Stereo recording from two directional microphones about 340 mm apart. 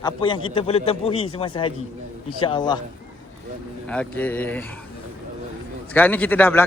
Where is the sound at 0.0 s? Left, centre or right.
Centre.